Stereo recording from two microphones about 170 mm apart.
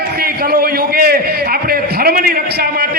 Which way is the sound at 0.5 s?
65° right (ahead or behind).